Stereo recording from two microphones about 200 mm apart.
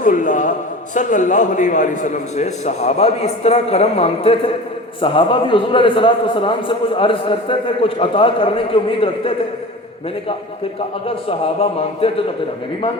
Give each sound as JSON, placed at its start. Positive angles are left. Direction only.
{"t": 0.0, "sound": "a man's voice", "side_deg": 40}
{"t": 11.3, "sound": "a man's voice", "side_deg": 30}